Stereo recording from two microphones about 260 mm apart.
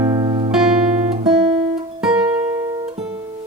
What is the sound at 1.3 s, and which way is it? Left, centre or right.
Guitar, centre.